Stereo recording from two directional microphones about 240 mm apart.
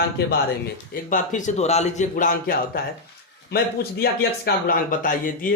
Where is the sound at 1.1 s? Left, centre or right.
Left.